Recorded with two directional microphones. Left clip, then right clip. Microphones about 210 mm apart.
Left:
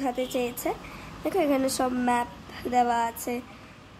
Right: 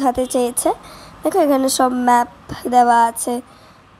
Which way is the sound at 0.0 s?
30° right (ahead or behind).